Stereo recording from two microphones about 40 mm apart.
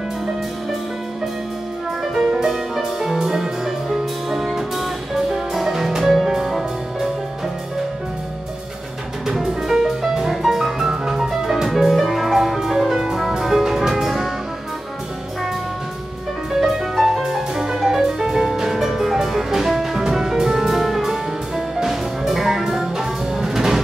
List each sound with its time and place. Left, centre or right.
2.1 s music: centre
9.3 s music: centre
16.6 s music: centre